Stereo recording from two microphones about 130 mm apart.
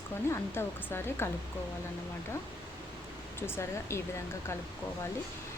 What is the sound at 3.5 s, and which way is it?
Speech, 20° left (ahead or behind).